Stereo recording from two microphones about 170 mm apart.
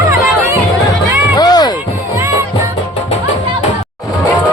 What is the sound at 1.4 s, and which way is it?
Music, 25° left (ahead or behind).